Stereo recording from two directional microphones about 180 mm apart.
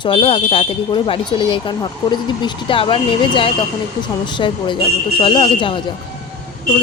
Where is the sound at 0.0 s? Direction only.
30° left (ahead or behind).